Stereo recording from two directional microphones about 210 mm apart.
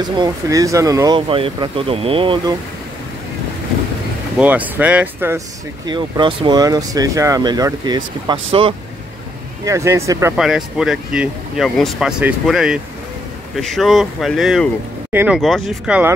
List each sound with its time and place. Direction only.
0.2 s speech: 15° right (ahead or behind)
4.4 s speech: 5° right (ahead or behind)
5.9 s speech: 20° right (ahead or behind)
9.7 s speech: 15° right (ahead or behind)
10.3 s speech: centre (ahead or behind)